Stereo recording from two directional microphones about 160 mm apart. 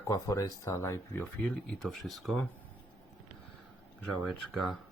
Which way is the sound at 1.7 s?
Centre (ahead or behind).